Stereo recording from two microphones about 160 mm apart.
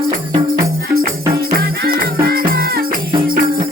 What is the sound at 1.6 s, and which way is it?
Music, 65° right (ahead or behind).